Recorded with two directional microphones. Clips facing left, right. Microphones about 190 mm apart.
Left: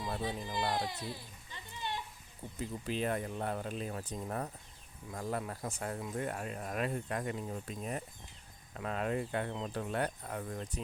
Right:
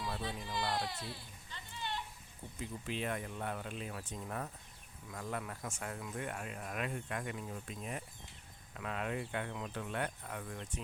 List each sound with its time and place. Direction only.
0.4 s speech: 20° left (ahead or behind)
1.5 s a sound: 20° left (ahead or behind)
2.6 s speech: 40° left (ahead or behind)